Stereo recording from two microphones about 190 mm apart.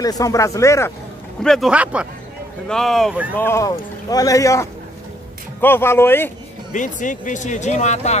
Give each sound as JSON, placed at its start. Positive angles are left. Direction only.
{"t": 0.0, "sound": "speech", "side_deg": 20}
{"t": 1.4, "sound": "speech", "side_deg": 0}
{"t": 3.3, "sound": "speech", "side_deg": 15}
{"t": 6.7, "sound": "speech", "side_deg": 40}